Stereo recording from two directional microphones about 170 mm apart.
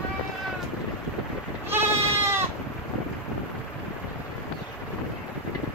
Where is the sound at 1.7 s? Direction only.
15° right (ahead or behind).